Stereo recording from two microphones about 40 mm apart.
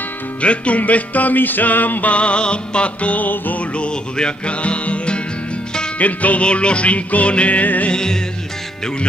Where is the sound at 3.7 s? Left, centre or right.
Left.